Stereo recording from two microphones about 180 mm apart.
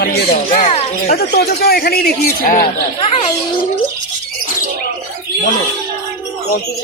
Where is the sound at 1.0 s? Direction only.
60° left (ahead or behind).